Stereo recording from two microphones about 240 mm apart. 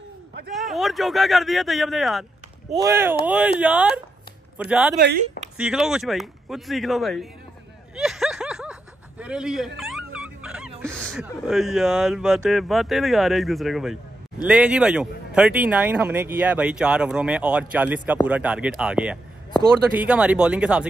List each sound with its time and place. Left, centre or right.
0.6 s a man's voice: centre
4.9 s speech: right
5.6 s a man's voice: centre
7.9 s snicker: centre
9.2 s dog: centre
11.4 s a man's voice: centre